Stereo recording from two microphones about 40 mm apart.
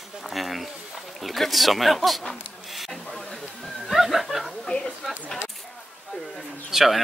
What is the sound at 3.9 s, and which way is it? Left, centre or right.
Snicker, centre.